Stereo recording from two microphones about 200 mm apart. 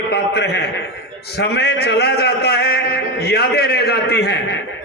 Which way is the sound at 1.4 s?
55° left (ahead or behind).